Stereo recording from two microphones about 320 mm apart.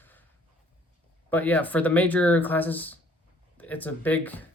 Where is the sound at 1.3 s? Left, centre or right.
Centre.